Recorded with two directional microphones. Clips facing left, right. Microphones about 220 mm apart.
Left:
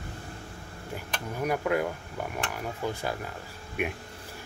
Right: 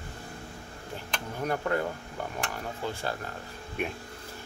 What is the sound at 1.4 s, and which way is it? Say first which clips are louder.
Speech: left 2 dB; 10° left (ahead or behind).